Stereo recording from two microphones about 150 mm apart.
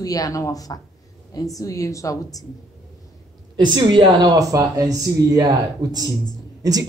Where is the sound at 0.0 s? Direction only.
25° left (ahead or behind).